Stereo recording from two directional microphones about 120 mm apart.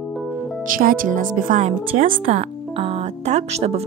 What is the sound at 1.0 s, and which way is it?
Speech, 90° right.